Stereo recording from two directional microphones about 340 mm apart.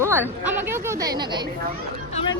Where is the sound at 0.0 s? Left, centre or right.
Centre.